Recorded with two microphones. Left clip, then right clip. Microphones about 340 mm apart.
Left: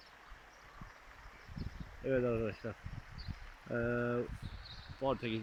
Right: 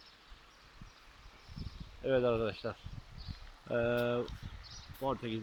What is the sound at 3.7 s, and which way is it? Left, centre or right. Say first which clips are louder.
Speech: right 4 dB; centre.